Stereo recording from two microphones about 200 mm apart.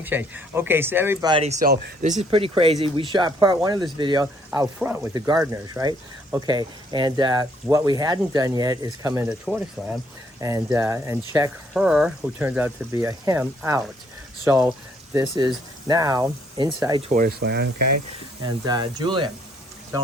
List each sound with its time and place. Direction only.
0.0 s speech: 10° right (ahead or behind)
1.3 s speech: 30° right (ahead or behind)
1.6 s speech: 40° right (ahead or behind); by 9.2 s 20° right (ahead or behind)
9.3 s speech: 5° right (ahead or behind)
10.4 s speech: 15° right (ahead or behind)
11.7 s speech: 5° right (ahead or behind); by 17.1 s 20° right (ahead or behind)
17.1 s speech: 45° right (ahead or behind)
18.4 s speech: 20° right (ahead or behind)